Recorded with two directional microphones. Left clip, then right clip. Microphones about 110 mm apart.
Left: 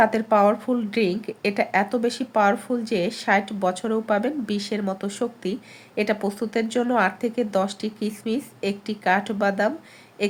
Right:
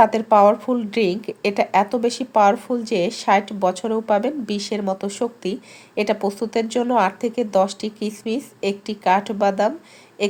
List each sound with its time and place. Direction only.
0.0 s speech: 20° right (ahead or behind)